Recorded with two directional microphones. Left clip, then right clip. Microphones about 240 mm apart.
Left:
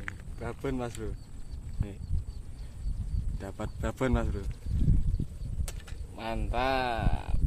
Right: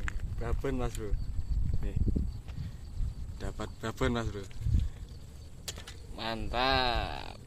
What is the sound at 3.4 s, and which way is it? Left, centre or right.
Speech, left.